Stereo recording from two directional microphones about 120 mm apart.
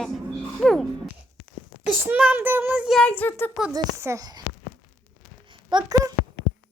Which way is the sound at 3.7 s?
25° right (ahead or behind).